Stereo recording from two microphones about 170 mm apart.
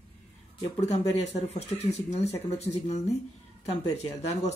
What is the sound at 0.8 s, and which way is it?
Speech, 40° left (ahead or behind).